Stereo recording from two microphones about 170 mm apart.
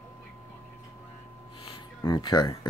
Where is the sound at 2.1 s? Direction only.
25° left (ahead or behind).